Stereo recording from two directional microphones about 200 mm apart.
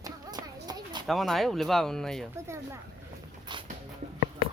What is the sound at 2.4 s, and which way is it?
Speech, 15° right (ahead or behind).